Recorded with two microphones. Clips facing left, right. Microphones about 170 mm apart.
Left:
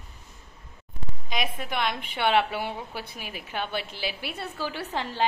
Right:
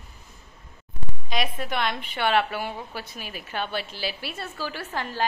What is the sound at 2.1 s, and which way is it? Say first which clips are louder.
A woman's voice: even; 20° left (ahead or behind).